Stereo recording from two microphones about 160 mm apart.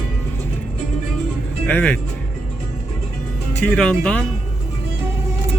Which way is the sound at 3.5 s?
5° left (ahead or behind).